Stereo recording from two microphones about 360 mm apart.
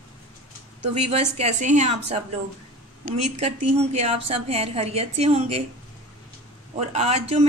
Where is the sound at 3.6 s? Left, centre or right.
Centre.